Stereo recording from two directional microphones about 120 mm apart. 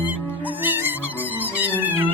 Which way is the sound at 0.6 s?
15° right (ahead or behind).